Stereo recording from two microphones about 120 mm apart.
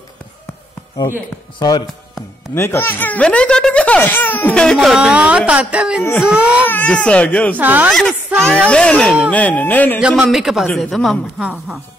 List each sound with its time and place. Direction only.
1.6 s speech: 35° left (ahead or behind)
2.5 s speech: 20° left (ahead or behind); by 6.6 s 10° right (ahead or behind)
6.6 s speech: 15° left (ahead or behind)
7.5 s speech: 15° right (ahead or behind)
7.9 s a woman's voice: 5° left (ahead or behind)
9.9 s a woman's voice: 5° right (ahead or behind)